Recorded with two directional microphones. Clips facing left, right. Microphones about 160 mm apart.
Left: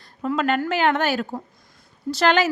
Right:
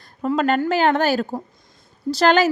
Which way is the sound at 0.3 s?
40° right (ahead or behind).